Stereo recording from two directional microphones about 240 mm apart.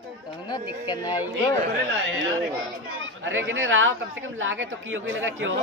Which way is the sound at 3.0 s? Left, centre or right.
Right.